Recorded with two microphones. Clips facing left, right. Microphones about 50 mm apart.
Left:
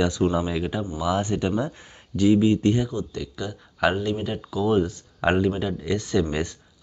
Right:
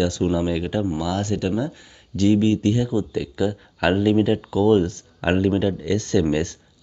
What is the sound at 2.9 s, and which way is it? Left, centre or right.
Speech, centre.